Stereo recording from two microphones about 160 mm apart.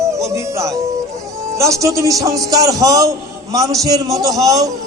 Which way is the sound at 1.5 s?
20° right (ahead or behind).